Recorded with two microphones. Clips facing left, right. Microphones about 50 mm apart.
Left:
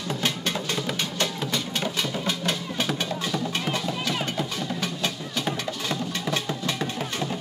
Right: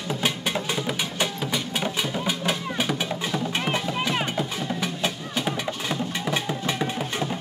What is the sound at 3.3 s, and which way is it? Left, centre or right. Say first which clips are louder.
Music: right 3 dB; right.